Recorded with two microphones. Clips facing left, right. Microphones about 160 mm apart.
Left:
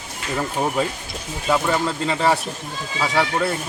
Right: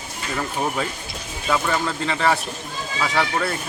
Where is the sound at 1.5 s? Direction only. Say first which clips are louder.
Left 2 dB; 15° left (ahead or behind).